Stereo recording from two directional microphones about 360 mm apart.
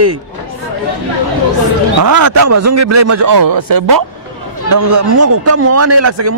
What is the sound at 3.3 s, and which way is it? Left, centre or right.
Speech, right.